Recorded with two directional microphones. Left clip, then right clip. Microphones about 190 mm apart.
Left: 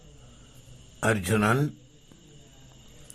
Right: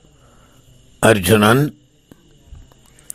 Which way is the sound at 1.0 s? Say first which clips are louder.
Right 13 dB; 35° right (ahead or behind).